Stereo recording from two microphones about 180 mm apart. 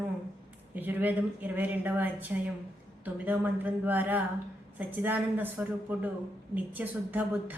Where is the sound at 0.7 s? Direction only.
10° right (ahead or behind).